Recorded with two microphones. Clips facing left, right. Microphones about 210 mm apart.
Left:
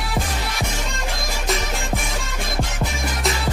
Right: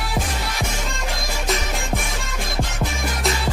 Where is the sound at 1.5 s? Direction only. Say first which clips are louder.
Even; centre (ahead or behind).